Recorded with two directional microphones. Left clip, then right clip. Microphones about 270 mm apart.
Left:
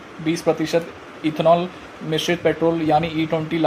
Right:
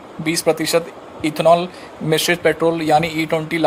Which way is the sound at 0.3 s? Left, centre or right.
Right.